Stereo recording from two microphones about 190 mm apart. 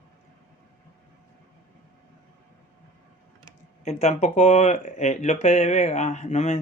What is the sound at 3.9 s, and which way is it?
Speech, 35° left (ahead or behind).